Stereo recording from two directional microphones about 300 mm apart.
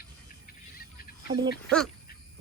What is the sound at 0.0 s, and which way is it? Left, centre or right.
Cricket, left.